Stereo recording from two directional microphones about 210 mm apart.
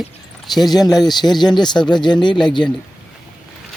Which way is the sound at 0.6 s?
20° left (ahead or behind).